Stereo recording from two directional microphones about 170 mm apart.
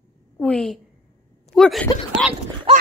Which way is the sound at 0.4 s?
5° left (ahead or behind).